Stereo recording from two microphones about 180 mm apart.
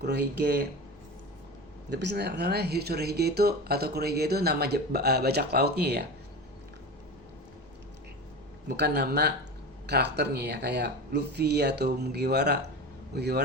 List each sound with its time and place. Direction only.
0.0 s speech: 65° right (ahead or behind)
1.9 s speech: 75° right (ahead or behind)
8.6 s speech: 65° right (ahead or behind)